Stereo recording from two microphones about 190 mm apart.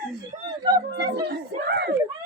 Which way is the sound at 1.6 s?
55° right (ahead or behind).